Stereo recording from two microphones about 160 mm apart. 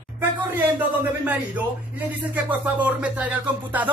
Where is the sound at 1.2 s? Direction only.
10° right (ahead or behind).